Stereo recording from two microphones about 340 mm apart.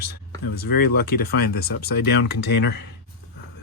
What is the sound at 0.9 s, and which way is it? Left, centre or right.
Speech, left.